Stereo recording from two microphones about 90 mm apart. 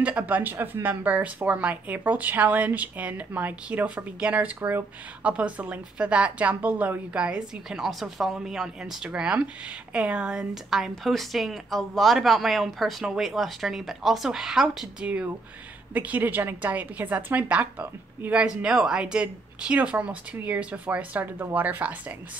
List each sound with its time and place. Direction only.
0.0 s a woman's voice: 20° right (ahead or behind)
5.2 s a woman's voice: 15° right (ahead or behind)
15.9 s a woman's voice: 20° right (ahead or behind)